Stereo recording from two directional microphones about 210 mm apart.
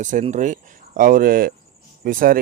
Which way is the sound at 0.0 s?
35° right (ahead or behind).